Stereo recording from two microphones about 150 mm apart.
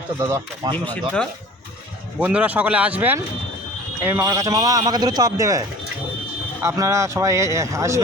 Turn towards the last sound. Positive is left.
turn(degrees=-20)  # may be behind; listen again after turning